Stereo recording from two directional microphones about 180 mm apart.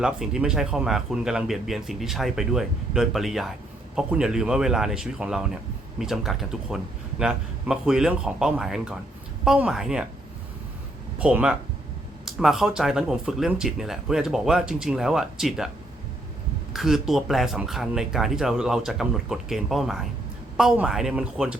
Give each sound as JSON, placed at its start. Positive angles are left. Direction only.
{"t": 0.0, "sound": "speech", "side_deg": -5}
{"t": 11.2, "sound": "speech", "side_deg": -5}
{"t": 16.7, "sound": "speech", "side_deg": 0}